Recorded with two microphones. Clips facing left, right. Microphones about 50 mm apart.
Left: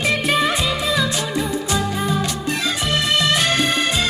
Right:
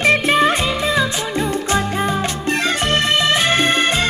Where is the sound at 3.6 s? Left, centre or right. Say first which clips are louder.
Right 3 dB; right.